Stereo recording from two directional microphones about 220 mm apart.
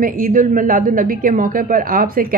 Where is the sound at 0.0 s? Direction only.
40° right (ahead or behind).